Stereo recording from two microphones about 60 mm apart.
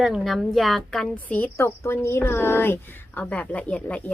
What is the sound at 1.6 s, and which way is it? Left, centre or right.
A woman's voice, left.